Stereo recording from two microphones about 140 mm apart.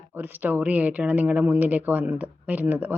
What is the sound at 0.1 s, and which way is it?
A woman's voice, 15° right (ahead or behind).